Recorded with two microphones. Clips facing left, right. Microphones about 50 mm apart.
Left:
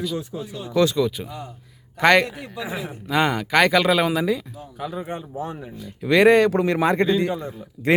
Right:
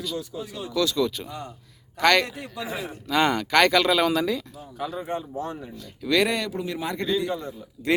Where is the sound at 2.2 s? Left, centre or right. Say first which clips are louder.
Left 2 dB; centre.